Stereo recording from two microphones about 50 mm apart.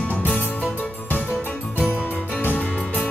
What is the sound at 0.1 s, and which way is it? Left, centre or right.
Music, left.